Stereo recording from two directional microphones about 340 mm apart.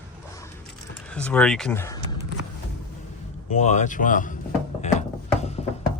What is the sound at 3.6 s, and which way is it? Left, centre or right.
Speech, left.